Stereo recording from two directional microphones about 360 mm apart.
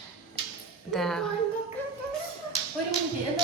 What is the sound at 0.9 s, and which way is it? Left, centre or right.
Speech, centre.